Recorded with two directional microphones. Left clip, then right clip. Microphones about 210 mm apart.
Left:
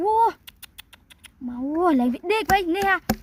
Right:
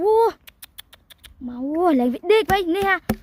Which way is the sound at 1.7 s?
45° right (ahead or behind).